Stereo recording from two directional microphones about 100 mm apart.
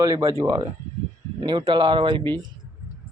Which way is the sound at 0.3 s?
30° right (ahead or behind).